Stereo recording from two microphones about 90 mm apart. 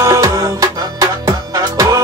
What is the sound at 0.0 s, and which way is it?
Music, 40° right (ahead or behind).